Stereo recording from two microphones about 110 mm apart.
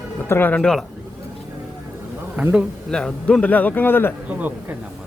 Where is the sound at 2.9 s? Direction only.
5° left (ahead or behind).